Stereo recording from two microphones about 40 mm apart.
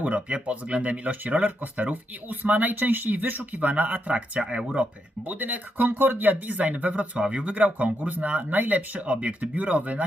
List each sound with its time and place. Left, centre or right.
0.0 s speech: right
4.4 s speech: right
5.3 s speech: right